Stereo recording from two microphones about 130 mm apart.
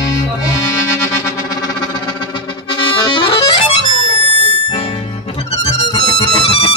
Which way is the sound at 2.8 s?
40° left (ahead or behind).